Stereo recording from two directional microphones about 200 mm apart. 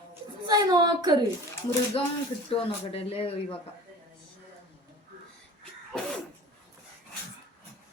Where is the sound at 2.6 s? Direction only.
30° left (ahead or behind).